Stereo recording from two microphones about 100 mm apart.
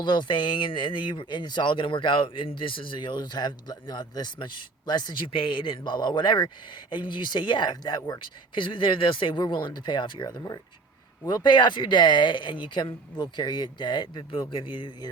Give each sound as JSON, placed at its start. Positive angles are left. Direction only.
{"t": 0.0, "sound": "speech", "side_deg": 50}